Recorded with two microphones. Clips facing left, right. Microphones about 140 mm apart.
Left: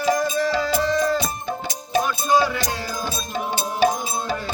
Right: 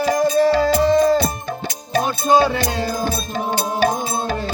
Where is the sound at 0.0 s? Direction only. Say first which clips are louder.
Right 4 dB; 35° right (ahead or behind).